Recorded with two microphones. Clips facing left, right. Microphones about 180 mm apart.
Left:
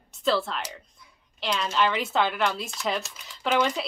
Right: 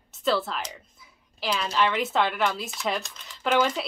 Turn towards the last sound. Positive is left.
turn(degrees=0)  # may be behind; listen again after turning